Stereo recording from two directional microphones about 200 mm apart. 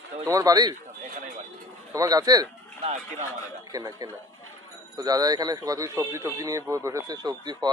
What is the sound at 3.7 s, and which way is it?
A man's voice, 20° right (ahead or behind).